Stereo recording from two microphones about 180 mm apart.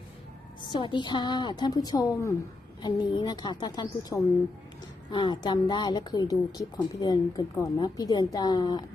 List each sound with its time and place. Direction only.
0.7 s a woman's voice: 25° left (ahead or behind)